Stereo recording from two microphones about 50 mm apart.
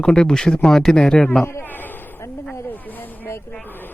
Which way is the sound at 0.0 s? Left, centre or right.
Centre.